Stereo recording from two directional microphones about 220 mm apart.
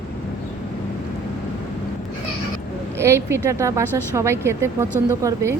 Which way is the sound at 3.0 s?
10° right (ahead or behind).